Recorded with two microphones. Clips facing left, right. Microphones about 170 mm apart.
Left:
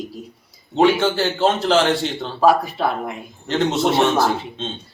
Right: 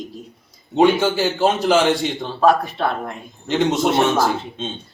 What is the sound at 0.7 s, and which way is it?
A man's voice, 15° right (ahead or behind).